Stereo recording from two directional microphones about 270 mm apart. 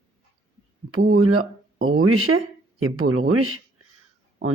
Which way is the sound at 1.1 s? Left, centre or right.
Right.